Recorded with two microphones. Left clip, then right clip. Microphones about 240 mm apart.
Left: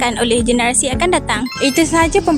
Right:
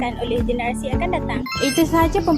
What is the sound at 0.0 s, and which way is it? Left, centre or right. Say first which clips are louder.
Speech: left 8 dB; left.